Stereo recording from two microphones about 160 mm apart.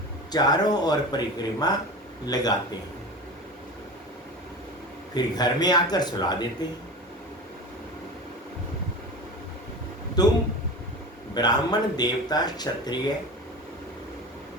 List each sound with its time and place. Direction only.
0.3 s speech: 25° left (ahead or behind)
5.1 s speech: 25° left (ahead or behind)
10.2 s speech: 25° left (ahead or behind)
11.3 s speech: 25° left (ahead or behind)